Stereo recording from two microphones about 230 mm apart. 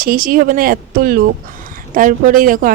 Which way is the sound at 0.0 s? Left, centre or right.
Right.